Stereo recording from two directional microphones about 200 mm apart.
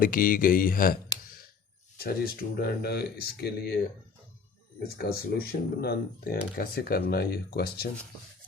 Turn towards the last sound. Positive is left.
turn(degrees=50)  # may be behind; listen again after turning